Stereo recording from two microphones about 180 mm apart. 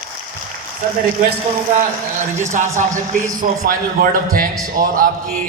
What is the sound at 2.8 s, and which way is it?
A man's voice, 45° right (ahead or behind).